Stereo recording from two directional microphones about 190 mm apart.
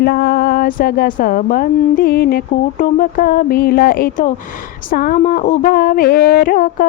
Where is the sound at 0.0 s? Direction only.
55° left (ahead or behind).